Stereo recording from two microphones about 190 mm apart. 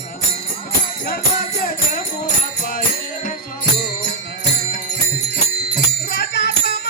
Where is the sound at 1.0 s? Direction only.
55° left (ahead or behind).